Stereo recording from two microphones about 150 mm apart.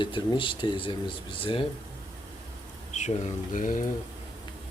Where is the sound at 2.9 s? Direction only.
50° left (ahead or behind).